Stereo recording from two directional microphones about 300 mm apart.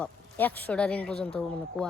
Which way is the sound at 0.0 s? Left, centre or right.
Centre.